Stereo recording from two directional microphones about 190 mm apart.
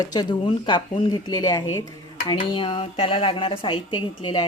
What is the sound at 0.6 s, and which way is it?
Speech, 25° left (ahead or behind).